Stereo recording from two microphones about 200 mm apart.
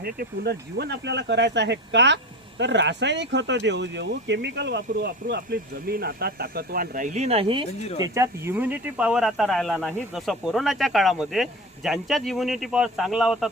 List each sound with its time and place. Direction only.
0.0 s speech: 55° right (ahead or behind); by 7.6 s 30° right (ahead or behind)
7.9 s speech: 15° right (ahead or behind)